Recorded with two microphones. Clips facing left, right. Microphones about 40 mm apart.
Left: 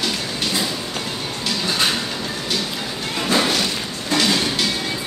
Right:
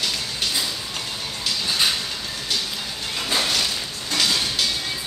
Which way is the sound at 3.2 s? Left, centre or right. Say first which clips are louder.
Left 5 dB; centre.